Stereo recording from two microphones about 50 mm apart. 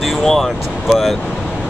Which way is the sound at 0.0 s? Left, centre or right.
Centre.